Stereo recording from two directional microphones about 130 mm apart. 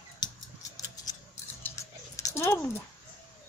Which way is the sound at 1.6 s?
25° left (ahead or behind).